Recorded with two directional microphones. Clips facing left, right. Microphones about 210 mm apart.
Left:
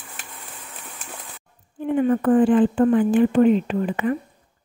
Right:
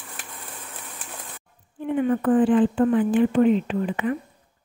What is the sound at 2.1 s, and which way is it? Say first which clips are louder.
Speech: left 2 dB; 40° left (ahead or behind).